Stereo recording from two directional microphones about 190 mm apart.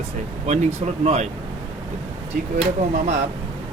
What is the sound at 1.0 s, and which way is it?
Speech, 35° right (ahead or behind).